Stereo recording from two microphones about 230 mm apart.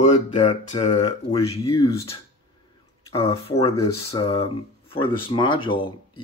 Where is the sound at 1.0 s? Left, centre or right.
Centre.